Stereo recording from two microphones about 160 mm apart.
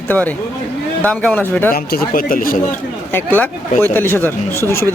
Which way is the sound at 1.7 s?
65° left (ahead or behind).